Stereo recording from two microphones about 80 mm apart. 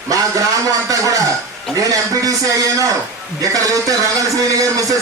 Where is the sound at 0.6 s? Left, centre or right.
Right.